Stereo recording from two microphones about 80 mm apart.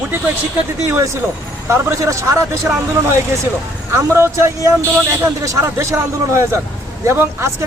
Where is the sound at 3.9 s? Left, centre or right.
Right.